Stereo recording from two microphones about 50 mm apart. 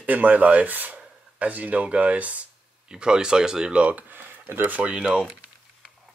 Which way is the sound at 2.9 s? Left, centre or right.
Centre.